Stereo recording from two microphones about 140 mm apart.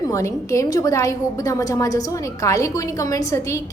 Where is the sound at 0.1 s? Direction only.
20° left (ahead or behind).